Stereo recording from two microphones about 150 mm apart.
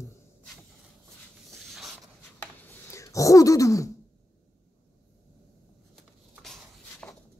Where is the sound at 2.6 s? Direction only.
20° left (ahead or behind).